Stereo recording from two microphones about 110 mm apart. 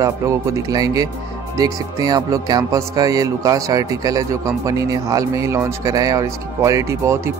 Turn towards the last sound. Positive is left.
turn(degrees=-25)  # may be behind; listen again after turning